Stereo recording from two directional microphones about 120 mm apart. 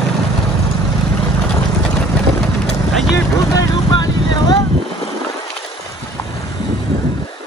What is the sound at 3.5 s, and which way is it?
Vehicle, 35° left (ahead or behind).